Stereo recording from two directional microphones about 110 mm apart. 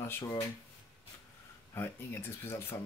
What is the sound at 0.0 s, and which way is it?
Speech, 25° left (ahead or behind).